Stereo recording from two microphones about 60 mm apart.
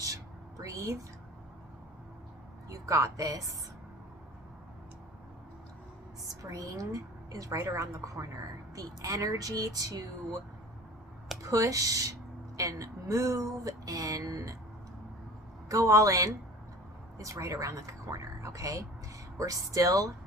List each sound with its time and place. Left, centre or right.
0.6 s a woman's voice: right
2.6 s a woman's voice: right
6.4 s speech: right
7.5 s a woman's voice: right
8.7 s speech: right
11.4 s speech: right
15.7 s speech: right